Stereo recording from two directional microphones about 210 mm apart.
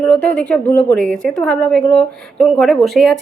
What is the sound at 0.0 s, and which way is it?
A woman's voice, 5° left (ahead or behind).